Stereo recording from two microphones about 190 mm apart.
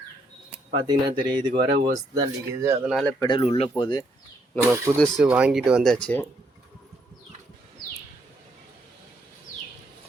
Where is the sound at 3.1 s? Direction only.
25° left (ahead or behind).